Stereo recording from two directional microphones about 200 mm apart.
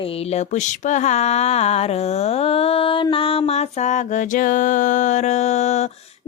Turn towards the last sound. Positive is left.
turn(degrees=35)  # may be behind; listen again after turning